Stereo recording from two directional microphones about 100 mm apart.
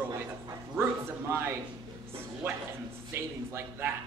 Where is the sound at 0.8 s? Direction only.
25° right (ahead or behind).